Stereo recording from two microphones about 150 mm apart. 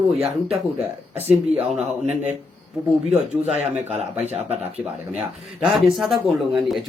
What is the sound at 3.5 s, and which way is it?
Speech, 45° right (ahead or behind).